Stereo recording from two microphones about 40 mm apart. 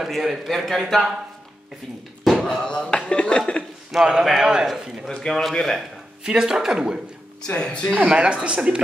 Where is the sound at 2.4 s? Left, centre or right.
Left.